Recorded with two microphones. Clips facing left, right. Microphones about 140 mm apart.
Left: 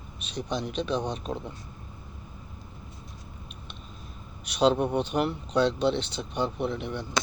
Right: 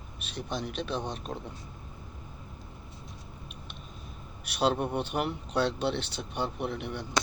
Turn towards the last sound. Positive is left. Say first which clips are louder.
# left 4 dB
turn(degrees=-10)  # may be behind; listen again after turning